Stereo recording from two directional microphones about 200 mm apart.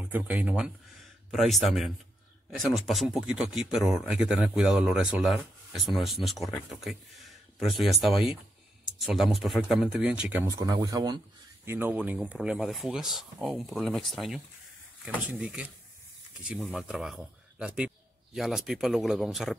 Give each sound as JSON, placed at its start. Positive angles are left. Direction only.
{"t": 0.0, "sound": "speech", "side_deg": -10}
{"t": 10.4, "sound": "speech", "side_deg": -20}